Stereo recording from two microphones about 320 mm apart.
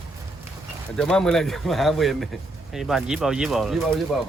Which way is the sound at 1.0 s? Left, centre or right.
Centre.